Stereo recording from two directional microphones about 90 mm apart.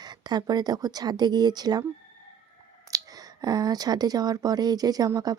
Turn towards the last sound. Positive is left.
turn(degrees=-45)  # may be behind; listen again after turning